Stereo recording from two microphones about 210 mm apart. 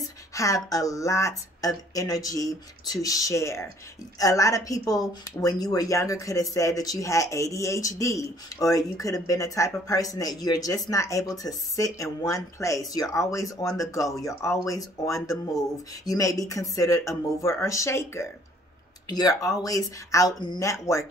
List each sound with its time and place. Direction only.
0.3 s speech: 15° left (ahead or behind)